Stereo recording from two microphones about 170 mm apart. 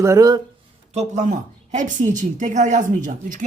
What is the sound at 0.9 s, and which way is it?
A woman's voice, 40° right (ahead or behind).